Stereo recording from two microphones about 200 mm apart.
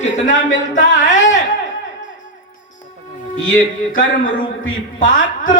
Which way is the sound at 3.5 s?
45° left (ahead or behind).